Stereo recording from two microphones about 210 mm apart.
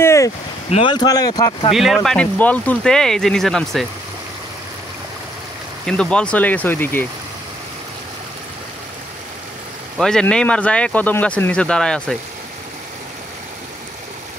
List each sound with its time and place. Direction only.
0.0 s a sound: 15° left (ahead or behind)
0.7 s speech: 25° left (ahead or behind)
1.7 s speech: centre (ahead or behind)
5.9 s speech: 5° left (ahead or behind)
9.9 s speech: 5° left (ahead or behind)